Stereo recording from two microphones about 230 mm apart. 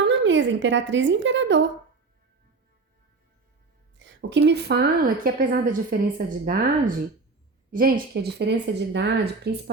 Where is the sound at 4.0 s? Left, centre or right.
Right.